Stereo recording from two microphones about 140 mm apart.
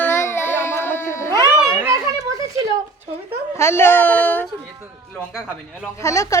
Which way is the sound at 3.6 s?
15° left (ahead or behind).